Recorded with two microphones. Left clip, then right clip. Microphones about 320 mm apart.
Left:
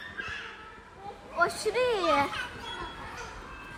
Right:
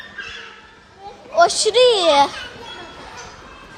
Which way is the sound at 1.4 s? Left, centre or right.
Centre.